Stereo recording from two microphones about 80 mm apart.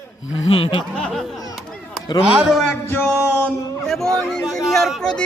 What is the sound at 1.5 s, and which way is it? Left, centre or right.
Chop, centre.